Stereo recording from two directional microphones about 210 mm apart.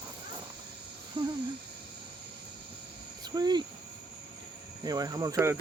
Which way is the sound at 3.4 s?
20° right (ahead or behind).